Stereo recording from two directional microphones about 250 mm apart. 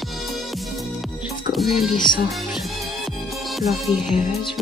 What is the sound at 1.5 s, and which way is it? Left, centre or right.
Music, centre.